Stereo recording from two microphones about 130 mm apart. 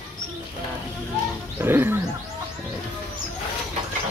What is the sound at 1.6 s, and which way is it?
Speech, 20° right (ahead or behind).